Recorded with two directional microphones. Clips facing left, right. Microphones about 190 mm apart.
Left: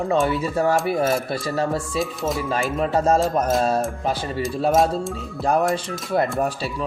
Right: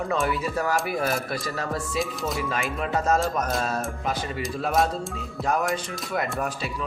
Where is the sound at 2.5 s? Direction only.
35° left (ahead or behind).